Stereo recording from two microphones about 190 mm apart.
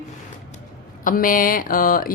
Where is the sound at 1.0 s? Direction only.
45° left (ahead or behind).